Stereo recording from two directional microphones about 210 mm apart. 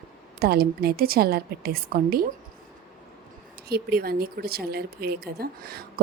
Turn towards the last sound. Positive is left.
turn(degrees=-45)  # may be behind; listen again after turning